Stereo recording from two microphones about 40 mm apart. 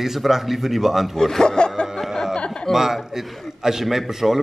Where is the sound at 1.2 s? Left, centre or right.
Centre.